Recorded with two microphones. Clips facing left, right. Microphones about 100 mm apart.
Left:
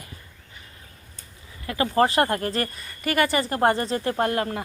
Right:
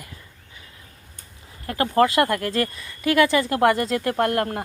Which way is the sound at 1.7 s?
60° right (ahead or behind).